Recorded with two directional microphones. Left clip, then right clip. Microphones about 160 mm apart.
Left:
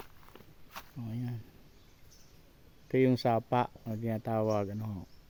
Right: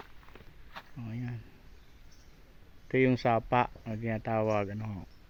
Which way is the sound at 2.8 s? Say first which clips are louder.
Right 1 dB; 20° left (ahead or behind).